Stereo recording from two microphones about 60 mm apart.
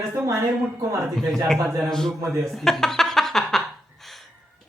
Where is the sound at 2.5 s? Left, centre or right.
Centre.